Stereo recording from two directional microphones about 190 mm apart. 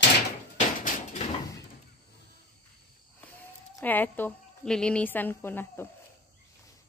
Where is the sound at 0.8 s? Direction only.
40° left (ahead or behind).